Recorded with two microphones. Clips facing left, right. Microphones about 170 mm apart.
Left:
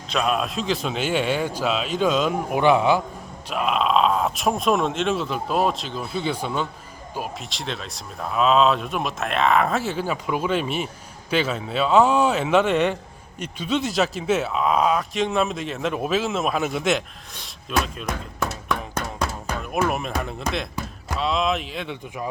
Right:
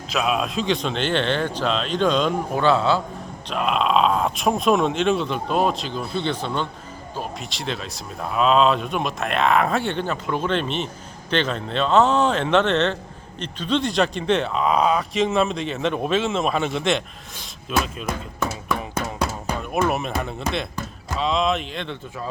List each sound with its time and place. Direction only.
0.1 s a man's voice: 5° right (ahead or behind)
2.6 s a man's voice: 15° left (ahead or behind)
3.5 s a man's voice: centre (ahead or behind)